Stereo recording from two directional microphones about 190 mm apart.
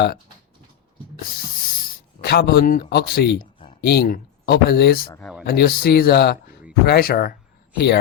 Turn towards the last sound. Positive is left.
turn(degrees=60)  # may be behind; listen again after turning